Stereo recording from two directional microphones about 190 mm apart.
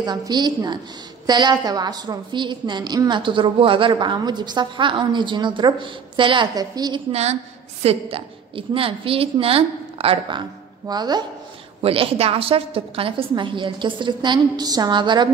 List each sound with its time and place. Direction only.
0.0 s a woman's voice: 20° right (ahead or behind)
7.1 s a woman's voice: 35° right (ahead or behind)